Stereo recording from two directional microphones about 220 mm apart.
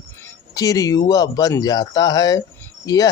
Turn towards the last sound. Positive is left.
turn(degrees=15)  # may be behind; listen again after turning